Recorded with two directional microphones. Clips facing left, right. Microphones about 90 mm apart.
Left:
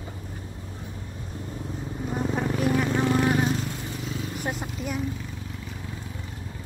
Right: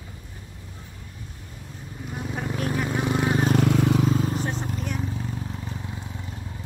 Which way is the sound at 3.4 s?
70° right (ahead or behind).